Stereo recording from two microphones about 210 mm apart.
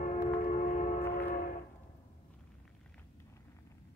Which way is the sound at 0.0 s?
40° left (ahead or behind).